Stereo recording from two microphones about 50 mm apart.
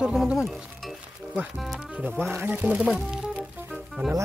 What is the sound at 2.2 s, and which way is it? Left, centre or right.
Speech, right.